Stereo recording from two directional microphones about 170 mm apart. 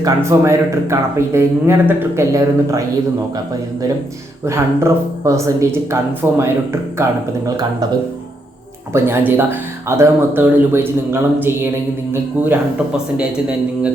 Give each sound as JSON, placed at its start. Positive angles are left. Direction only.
{"t": 0.0, "sound": "speech", "side_deg": -15}
{"t": 4.4, "sound": "speech", "side_deg": -15}
{"t": 8.9, "sound": "speech", "side_deg": -15}